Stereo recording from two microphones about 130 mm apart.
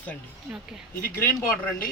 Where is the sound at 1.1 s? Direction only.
15° left (ahead or behind).